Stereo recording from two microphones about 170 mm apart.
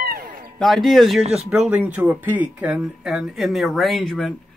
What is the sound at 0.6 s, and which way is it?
Speech, centre (ahead or behind).